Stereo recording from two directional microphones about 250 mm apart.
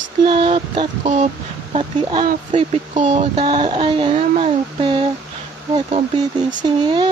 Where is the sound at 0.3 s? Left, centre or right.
Centre.